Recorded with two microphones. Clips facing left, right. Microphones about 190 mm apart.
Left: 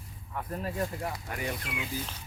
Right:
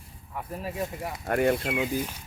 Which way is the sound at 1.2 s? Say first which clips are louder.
Right 12 dB; 55° right (ahead or behind).